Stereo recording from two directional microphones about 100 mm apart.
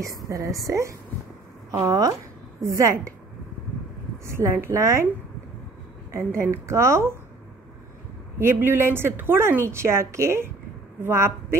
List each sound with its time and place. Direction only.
0.0 s a woman's voice: 35° right (ahead or behind)
4.3 s a woman's voice: 30° right (ahead or behind)
6.1 s a woman's voice: 30° right (ahead or behind)
8.4 s a woman's voice: 25° right (ahead or behind)